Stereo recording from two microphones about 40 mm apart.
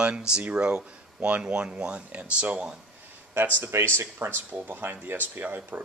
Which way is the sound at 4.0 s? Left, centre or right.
Right.